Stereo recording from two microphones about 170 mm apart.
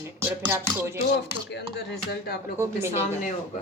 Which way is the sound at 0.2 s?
10° right (ahead or behind).